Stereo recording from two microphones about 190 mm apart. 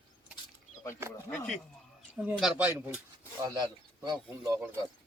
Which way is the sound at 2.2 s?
5° right (ahead or behind).